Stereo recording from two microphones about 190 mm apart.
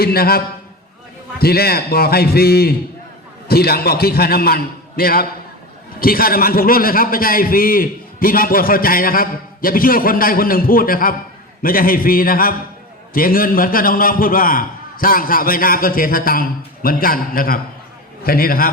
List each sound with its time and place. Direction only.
0.0 s a man's voice: 55° left (ahead or behind)